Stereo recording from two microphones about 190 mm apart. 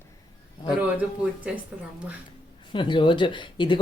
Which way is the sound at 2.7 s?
25° left (ahead or behind).